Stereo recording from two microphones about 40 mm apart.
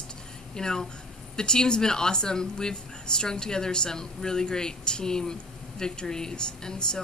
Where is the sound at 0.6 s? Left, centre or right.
Centre.